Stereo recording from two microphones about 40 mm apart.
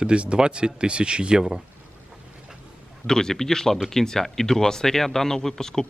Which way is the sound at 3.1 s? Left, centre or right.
Centre.